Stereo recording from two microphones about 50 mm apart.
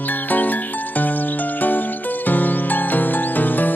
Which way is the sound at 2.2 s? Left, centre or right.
Left.